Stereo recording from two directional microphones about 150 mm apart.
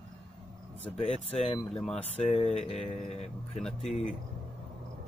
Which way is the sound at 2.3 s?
45° left (ahead or behind).